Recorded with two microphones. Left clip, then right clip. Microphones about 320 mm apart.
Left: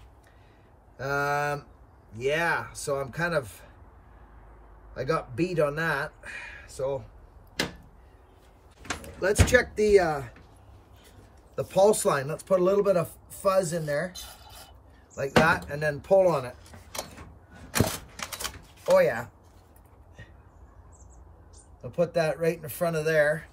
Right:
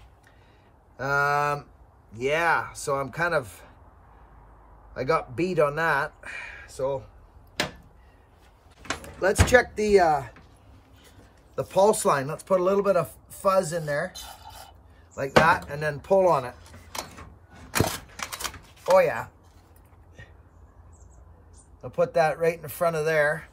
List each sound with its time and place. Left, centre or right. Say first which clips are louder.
0.9 s speech: right 4 dB; centre
4.9 s speech: right 3 dB; centre
9.0 s speech: right 2 dB; centre
11.5 s speech: right 1 dB; centre
17.6 s typing: right 2 dB; centre
21.8 s speech: right 3 dB; centre